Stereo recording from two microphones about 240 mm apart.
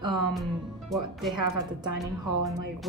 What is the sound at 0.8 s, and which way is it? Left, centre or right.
Speech, centre.